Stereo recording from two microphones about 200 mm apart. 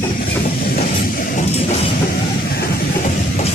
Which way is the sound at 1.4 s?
35° left (ahead or behind).